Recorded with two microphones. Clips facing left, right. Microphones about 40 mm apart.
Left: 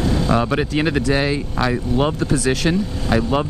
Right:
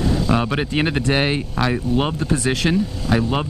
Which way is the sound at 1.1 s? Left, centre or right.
Right.